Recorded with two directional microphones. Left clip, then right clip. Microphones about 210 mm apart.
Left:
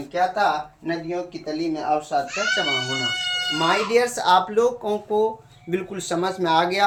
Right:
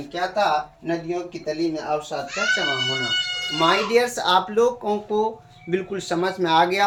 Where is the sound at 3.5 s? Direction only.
10° left (ahead or behind).